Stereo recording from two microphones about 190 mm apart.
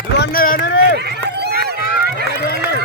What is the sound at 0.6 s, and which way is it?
Run, 85° left.